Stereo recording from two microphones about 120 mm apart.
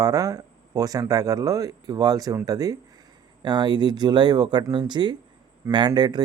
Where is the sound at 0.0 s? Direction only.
30° right (ahead or behind).